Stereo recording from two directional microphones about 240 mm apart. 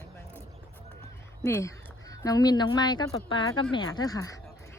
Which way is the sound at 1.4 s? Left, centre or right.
Centre.